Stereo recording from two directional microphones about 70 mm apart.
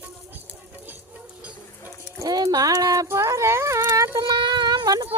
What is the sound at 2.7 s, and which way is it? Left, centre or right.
Speech, right.